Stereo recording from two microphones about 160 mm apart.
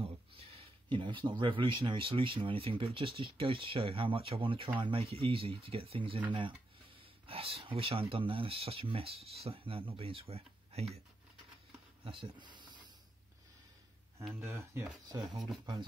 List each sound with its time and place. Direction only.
0.6 s speech: 30° right (ahead or behind)
7.2 s speech: 35° right (ahead or behind)
12.0 s speech: 30° right (ahead or behind)
14.4 s speech: 15° right (ahead or behind)